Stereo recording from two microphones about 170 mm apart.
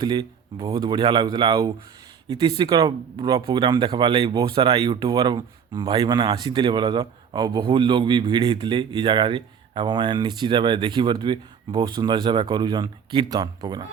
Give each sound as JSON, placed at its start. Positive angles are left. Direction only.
{"t": 0.0, "sound": "speech", "side_deg": -25}